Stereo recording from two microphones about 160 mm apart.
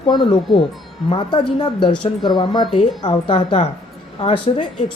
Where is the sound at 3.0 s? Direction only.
30° left (ahead or behind).